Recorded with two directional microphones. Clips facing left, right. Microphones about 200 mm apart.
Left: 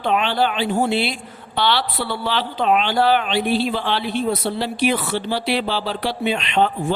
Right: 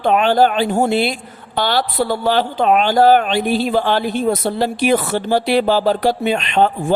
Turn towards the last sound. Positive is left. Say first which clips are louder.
# right 3 dB
turn(degrees=-45)  # may be behind; listen again after turning